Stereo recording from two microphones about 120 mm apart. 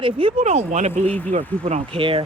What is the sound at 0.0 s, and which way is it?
Speech, 45° right (ahead or behind).